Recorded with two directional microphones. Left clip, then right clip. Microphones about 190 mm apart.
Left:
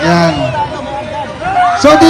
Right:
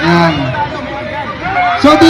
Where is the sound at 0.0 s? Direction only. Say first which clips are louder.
Even; 20° left (ahead or behind).